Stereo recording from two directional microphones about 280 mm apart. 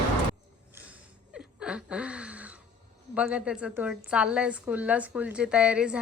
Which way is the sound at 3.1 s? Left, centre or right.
Centre.